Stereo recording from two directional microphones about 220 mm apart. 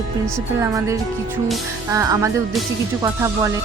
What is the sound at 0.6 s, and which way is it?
Speech, 15° right (ahead or behind).